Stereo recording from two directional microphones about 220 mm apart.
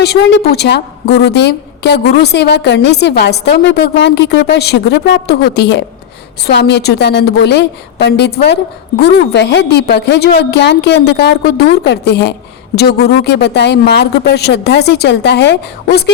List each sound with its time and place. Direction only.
0.0 s a woman's voice: 50° left (ahead or behind)